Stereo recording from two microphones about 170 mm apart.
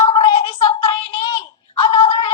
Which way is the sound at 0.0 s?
30° left (ahead or behind).